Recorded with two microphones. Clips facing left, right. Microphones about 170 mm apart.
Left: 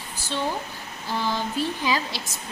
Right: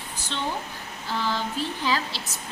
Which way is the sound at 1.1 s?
15° left (ahead or behind).